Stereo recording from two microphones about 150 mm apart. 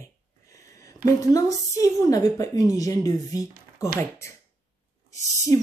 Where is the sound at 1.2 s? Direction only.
20° left (ahead or behind).